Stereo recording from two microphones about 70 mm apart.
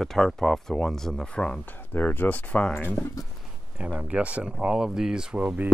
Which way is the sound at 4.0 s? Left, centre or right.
Centre.